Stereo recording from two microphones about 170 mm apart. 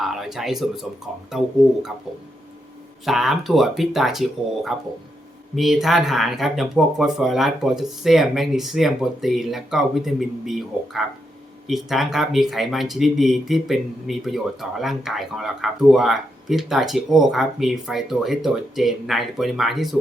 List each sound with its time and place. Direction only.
0.0 s speech: centre (ahead or behind)
3.1 s speech: centre (ahead or behind)